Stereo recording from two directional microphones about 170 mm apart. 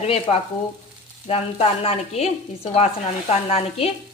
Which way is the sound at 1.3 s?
35° left (ahead or behind).